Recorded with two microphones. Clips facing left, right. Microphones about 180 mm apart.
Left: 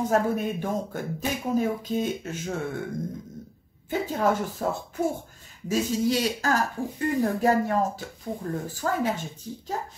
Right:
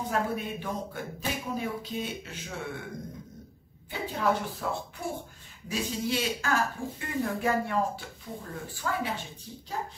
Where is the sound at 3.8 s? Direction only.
45° left (ahead or behind).